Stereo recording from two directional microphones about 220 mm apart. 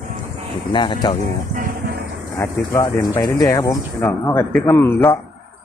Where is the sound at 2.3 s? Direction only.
15° left (ahead or behind).